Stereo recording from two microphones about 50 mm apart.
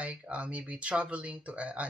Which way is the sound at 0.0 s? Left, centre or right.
Right.